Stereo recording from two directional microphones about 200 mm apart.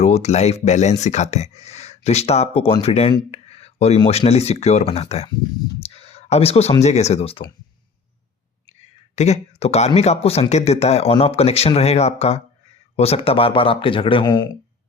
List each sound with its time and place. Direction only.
0.0 s speech: 35° left (ahead or behind)
6.0 s a sound: 30° left (ahead or behind)
6.8 s speech: 35° left (ahead or behind)
9.1 s speech: 35° left (ahead or behind)